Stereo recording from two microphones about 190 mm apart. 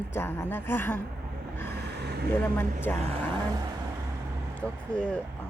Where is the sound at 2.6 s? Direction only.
10° left (ahead or behind).